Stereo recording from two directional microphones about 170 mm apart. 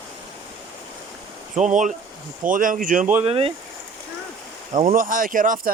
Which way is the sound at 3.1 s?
35° right (ahead or behind).